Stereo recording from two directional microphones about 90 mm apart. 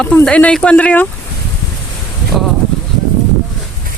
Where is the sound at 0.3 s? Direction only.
15° left (ahead or behind).